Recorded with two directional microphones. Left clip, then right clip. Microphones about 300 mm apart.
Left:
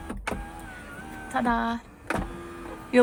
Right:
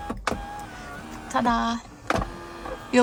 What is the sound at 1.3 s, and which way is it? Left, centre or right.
Speech, centre.